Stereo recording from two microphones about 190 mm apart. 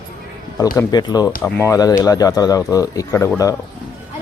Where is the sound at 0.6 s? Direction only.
20° left (ahead or behind).